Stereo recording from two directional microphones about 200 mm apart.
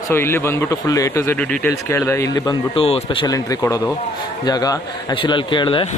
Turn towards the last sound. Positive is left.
turn(degrees=25)  # may be behind; listen again after turning